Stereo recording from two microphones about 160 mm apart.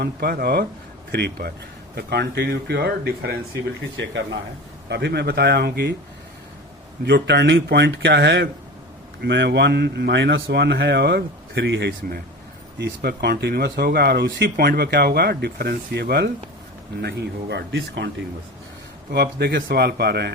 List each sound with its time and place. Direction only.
0.0 s speech: 80° right
4.9 s speech: 90° right
7.0 s speech: 90° right